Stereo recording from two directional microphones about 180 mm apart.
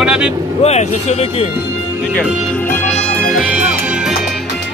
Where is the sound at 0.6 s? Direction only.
35° left (ahead or behind).